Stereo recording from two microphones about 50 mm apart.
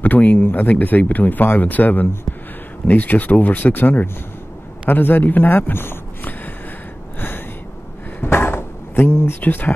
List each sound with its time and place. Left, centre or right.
0.0 s speech: left
7.2 s a sound: left
9.4 s speech: left